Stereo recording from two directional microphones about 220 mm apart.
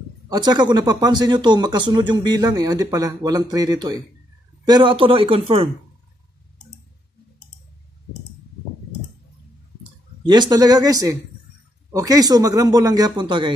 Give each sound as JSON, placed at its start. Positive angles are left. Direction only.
{"t": 0.3, "sound": "speech", "side_deg": -20}
{"t": 10.2, "sound": "speech", "side_deg": -20}